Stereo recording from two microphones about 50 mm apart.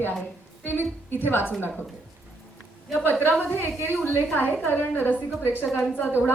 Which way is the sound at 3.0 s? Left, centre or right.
Left.